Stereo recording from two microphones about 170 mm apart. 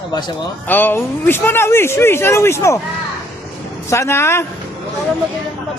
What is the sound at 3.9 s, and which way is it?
Speech, 15° left (ahead or behind).